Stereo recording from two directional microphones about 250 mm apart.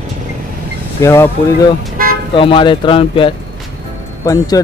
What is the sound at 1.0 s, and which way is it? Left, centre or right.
Speech, centre.